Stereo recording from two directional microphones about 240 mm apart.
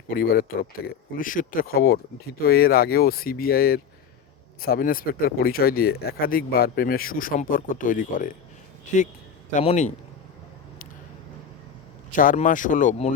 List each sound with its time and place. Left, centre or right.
0.1 s speech: left
9.5 s speech: left
12.1 s speech: left